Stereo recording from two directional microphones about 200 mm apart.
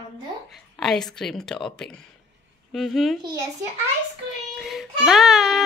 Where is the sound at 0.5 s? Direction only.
Centre (ahead or behind).